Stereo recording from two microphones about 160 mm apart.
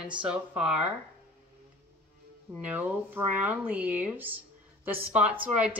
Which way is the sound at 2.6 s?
10° right (ahead or behind).